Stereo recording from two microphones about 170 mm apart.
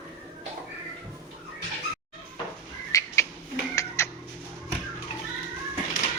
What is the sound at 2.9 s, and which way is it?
Bird, 20° left (ahead or behind).